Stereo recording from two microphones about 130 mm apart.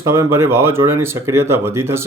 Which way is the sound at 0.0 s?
20° right (ahead or behind).